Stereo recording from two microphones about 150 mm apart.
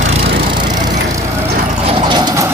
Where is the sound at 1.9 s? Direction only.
30° right (ahead or behind).